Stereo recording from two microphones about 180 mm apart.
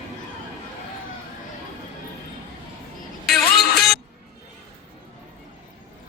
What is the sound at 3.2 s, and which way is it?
Music, centre (ahead or behind).